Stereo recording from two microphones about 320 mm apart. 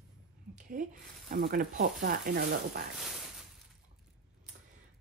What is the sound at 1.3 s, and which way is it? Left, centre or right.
Speech, right.